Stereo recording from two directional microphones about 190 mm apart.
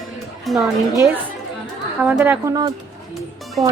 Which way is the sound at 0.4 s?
Centre (ahead or behind).